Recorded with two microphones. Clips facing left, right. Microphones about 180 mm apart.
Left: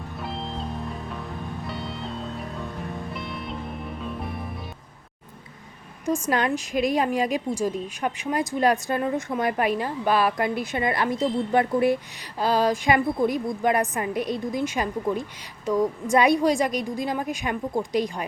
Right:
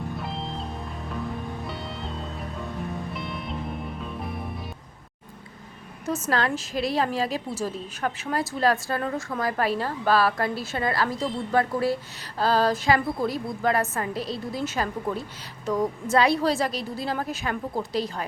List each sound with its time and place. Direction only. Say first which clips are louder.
0.2 s music: left 1 dB; centre (ahead or behind)
6.1 s a woman's voice: left 2 dB; 15° left (ahead or behind)